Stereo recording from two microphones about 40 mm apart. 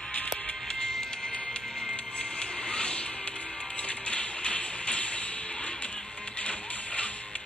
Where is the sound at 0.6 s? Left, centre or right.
Centre.